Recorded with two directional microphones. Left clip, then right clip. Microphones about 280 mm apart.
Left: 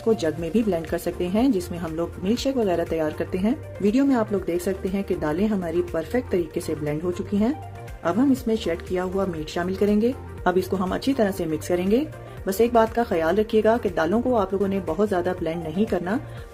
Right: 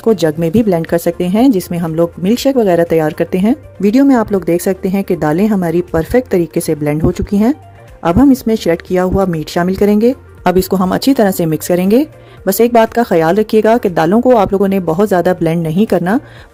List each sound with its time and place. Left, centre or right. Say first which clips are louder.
0.0 s speech: right 11 dB; right